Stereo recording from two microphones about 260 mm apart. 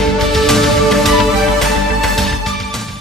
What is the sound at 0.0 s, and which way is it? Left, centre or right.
Music, centre.